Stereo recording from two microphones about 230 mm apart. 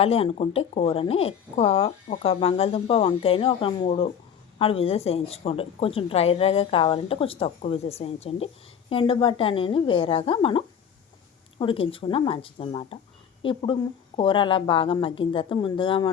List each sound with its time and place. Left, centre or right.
0.0 s speech: left